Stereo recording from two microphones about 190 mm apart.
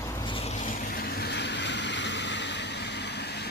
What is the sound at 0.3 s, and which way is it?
Vehicle, 35° left (ahead or behind).